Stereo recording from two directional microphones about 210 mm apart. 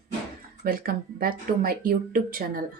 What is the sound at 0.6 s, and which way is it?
Speech, 45° right (ahead or behind).